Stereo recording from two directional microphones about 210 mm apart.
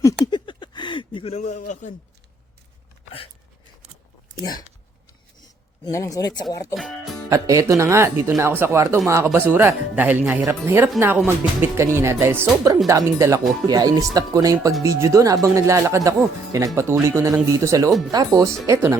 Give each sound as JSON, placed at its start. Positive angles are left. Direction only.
{"t": 0.0, "sound": "a sound", "side_deg": 20}
{"t": 4.4, "sound": "speech", "side_deg": 20}
{"t": 5.8, "sound": "speech", "side_deg": 15}
{"t": 6.7, "sound": "speech", "side_deg": 0}
{"t": 7.3, "sound": "speech", "side_deg": -15}